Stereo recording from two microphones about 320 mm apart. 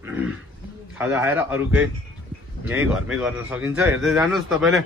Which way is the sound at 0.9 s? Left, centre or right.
Centre.